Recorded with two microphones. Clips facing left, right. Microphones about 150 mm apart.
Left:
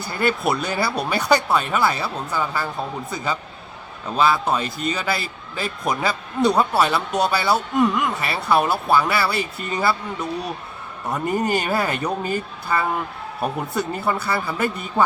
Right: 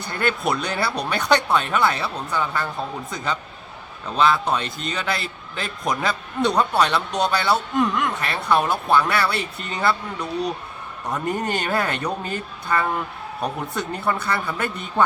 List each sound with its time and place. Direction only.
0.0 s a man's voice: 5° left (ahead or behind)
11.1 s a man's voice: centre (ahead or behind)